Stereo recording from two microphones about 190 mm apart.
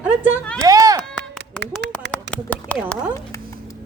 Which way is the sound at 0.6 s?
20° right (ahead or behind).